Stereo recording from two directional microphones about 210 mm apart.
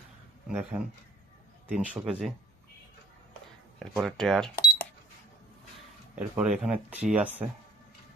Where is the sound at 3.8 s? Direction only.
Centre (ahead or behind).